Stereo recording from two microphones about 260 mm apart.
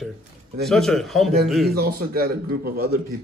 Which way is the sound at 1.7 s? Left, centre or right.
Right.